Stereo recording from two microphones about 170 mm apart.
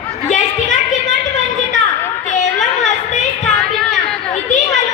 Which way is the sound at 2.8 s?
45° left (ahead or behind).